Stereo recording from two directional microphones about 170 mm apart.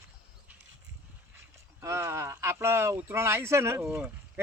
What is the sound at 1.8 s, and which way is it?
Speech, 15° right (ahead or behind).